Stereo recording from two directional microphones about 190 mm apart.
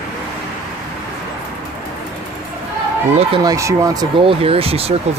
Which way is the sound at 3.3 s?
20° right (ahead or behind).